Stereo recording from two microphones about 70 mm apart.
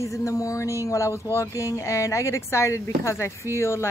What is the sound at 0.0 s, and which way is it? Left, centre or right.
Speech, left.